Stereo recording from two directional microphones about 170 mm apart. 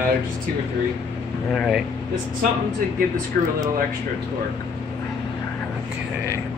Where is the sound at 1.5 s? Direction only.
Centre (ahead or behind).